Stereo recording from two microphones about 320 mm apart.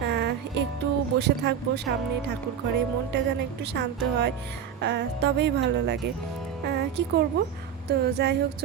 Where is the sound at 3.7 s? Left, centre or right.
Right.